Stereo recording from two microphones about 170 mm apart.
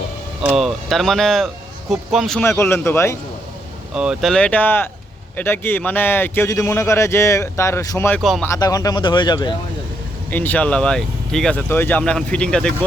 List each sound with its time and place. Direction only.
0.4 s speech: centre (ahead or behind)
2.4 s a man's voice: 15° left (ahead or behind)
3.9 s a man's voice: 5° right (ahead or behind); by 8.2 s 15° left (ahead or behind)
8.2 s speech: centre (ahead or behind)
8.4 s speech: 20° left (ahead or behind)
10.3 s a man's voice: 10° left (ahead or behind)